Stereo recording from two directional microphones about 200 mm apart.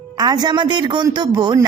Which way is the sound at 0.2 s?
20° right (ahead or behind).